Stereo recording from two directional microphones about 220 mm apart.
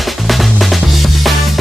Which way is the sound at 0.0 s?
Centre (ahead or behind).